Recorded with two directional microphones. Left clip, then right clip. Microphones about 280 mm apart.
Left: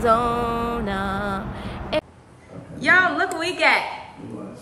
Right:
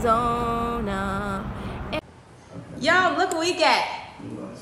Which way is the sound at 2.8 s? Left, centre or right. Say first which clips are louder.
Left 2 dB; centre.